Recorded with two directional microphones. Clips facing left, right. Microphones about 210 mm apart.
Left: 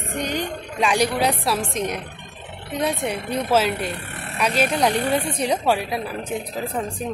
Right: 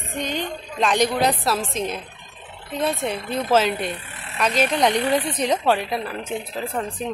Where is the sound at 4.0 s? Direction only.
65° left (ahead or behind).